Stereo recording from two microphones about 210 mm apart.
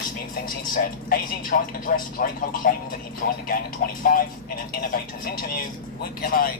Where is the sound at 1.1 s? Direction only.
40° left (ahead or behind).